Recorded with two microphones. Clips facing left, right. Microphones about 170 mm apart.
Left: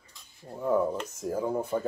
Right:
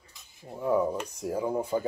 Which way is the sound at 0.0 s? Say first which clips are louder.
Even; 5° right (ahead or behind).